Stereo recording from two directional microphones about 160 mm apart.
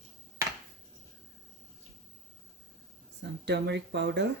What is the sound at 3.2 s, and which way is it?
Speech, 90° right.